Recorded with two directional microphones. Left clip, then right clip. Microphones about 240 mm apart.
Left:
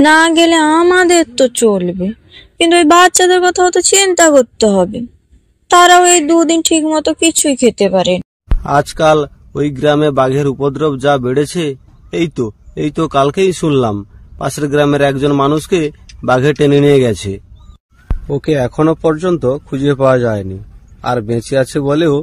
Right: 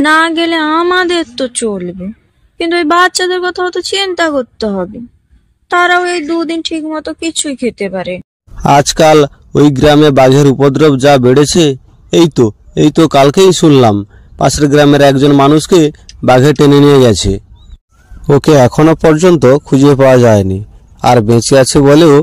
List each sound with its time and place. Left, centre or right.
0.0 s speech: centre
8.6 s a man's voice: right